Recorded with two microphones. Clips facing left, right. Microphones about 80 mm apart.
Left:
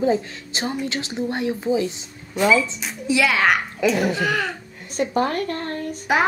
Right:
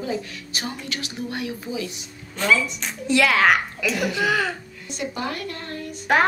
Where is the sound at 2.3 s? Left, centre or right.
Centre.